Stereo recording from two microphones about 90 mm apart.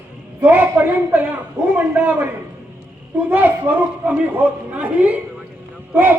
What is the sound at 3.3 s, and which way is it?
A man's voice, 20° right (ahead or behind).